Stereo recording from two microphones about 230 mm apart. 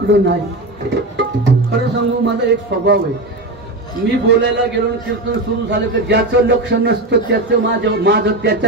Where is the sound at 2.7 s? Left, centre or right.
Right.